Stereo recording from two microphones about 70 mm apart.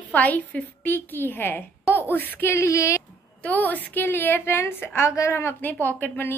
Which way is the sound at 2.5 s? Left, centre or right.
Left.